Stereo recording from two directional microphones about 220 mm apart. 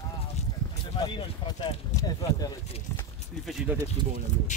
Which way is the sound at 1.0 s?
20° left (ahead or behind).